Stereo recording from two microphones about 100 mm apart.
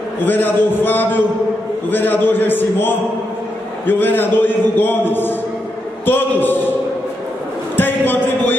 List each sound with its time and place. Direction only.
0.2 s a man's voice: 20° left (ahead or behind)
7.7 s speech: 20° left (ahead or behind)